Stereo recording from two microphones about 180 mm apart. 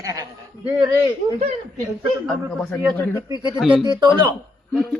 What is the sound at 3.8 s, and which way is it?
Speech, 25° right (ahead or behind).